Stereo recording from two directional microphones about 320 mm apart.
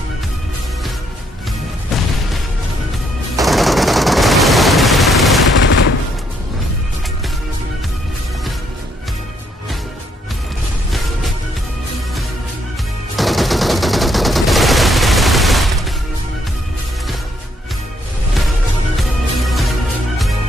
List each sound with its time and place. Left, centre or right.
3.4 s machine gun: centre
5.6 s gunshot: left
13.1 s gunshot: centre
19.4 s music: centre